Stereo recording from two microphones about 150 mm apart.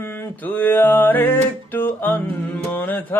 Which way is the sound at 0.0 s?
15° left (ahead or behind).